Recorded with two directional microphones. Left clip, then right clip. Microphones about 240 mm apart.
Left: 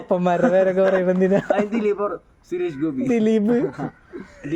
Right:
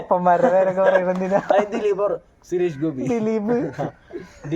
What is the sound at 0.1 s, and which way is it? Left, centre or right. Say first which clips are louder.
A man's voice: right 2 dB; left.